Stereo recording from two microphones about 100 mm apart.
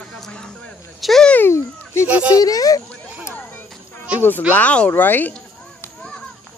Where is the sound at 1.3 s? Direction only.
25° left (ahead or behind).